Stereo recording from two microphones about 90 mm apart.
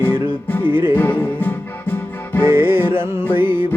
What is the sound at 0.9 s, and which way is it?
Music, 20° left (ahead or behind).